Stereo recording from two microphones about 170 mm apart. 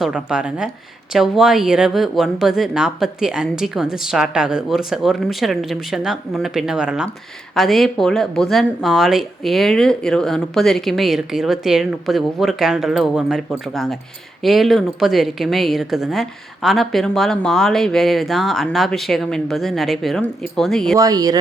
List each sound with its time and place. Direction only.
0.0 s speech: 5° right (ahead or behind)
20.9 s speech: 20° right (ahead or behind)